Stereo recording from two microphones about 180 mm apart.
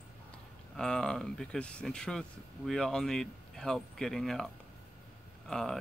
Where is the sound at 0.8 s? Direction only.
5° left (ahead or behind).